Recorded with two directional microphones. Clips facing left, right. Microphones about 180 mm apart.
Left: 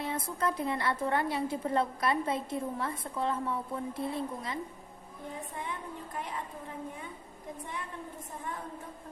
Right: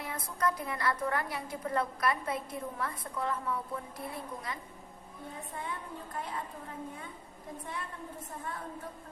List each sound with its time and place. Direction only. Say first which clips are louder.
0.0 s a woman's voice: left 1 dB; 25° left (ahead or behind)